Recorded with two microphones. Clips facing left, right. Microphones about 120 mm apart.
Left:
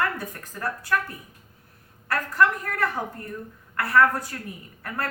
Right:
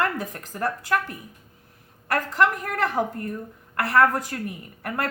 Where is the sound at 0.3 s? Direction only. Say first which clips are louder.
Right 4 dB; 45° right (ahead or behind).